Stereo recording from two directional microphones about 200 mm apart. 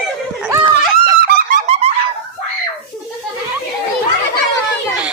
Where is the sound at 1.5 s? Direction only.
30° right (ahead or behind).